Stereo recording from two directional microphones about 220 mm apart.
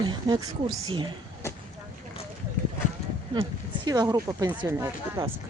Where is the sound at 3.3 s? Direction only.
20° right (ahead or behind).